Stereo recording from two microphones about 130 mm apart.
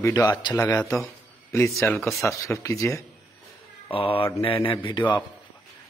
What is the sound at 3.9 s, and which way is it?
A man's voice, 45° left (ahead or behind).